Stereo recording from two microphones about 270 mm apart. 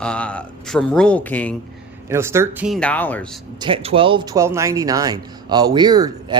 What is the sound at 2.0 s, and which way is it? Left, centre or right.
Speech, centre.